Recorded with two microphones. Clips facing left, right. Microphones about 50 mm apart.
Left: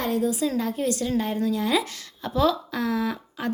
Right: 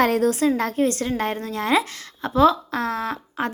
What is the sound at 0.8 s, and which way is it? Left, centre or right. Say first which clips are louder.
A woman's voice: right 2 dB; right.